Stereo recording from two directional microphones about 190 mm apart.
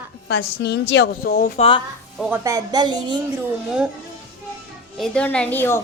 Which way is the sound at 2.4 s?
20° right (ahead or behind).